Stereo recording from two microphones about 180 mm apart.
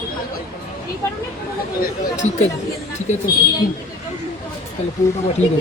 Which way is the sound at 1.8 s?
45° left (ahead or behind).